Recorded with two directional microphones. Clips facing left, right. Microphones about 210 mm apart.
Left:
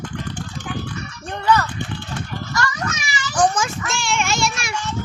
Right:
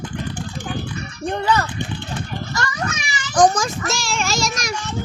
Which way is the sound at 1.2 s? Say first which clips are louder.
Even; 20° right (ahead or behind).